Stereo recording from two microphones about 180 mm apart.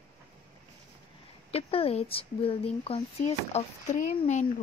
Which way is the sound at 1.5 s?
35° left (ahead or behind).